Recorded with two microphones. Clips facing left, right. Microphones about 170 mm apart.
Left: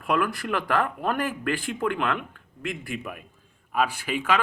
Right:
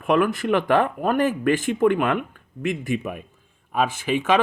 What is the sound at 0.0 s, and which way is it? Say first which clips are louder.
Speech: right 6 dB; 20° right (ahead or behind).